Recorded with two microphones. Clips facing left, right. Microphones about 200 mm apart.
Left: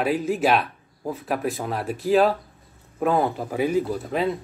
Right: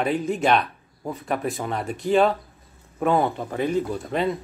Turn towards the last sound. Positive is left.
turn(degrees=5)  # may be behind; listen again after turning